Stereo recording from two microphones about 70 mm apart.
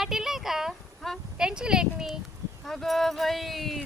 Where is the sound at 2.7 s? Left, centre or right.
Centre.